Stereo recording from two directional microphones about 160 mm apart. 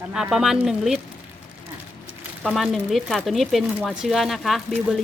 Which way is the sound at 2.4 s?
Centre (ahead or behind).